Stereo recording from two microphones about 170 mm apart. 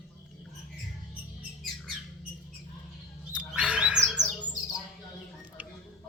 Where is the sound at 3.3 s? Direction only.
5° right (ahead or behind).